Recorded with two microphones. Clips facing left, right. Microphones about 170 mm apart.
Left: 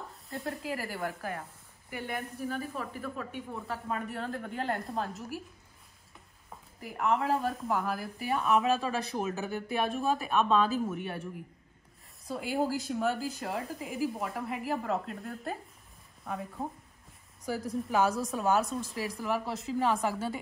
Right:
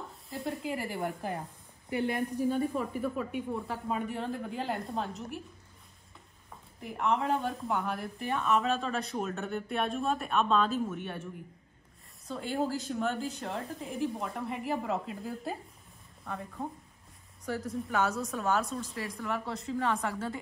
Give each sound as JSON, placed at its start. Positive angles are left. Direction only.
{"t": 0.1, "sound": "speech", "side_deg": 0}
{"t": 1.0, "sound": "speech", "side_deg": -20}
{"t": 3.3, "sound": "speech", "side_deg": 0}
{"t": 6.8, "sound": "speech", "side_deg": 5}
{"t": 12.3, "sound": "speech", "side_deg": 5}